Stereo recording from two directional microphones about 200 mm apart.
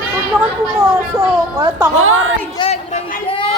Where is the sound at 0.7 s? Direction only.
15° right (ahead or behind).